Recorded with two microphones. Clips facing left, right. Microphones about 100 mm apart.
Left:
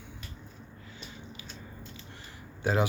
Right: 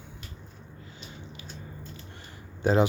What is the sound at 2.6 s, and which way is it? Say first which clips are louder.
Speech: right 5 dB; 25° right (ahead or behind).